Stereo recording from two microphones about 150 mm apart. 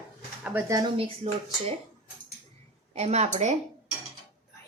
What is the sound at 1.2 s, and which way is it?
Speech, 40° right (ahead or behind).